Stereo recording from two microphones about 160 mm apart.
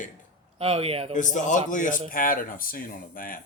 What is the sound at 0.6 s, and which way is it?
Speech, 40° right (ahead or behind).